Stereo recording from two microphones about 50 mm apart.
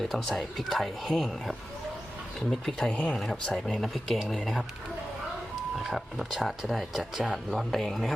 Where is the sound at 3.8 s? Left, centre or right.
Centre.